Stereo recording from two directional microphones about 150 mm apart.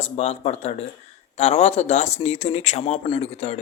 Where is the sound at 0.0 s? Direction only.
45° left (ahead or behind).